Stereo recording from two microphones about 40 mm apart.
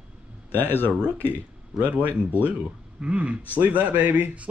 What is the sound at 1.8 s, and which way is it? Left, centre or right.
Speech, right.